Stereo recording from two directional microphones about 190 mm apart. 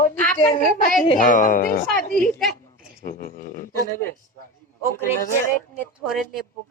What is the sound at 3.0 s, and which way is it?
Speech, 50° left (ahead or behind).